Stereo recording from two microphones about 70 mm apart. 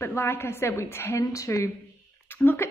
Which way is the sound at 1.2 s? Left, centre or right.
Left.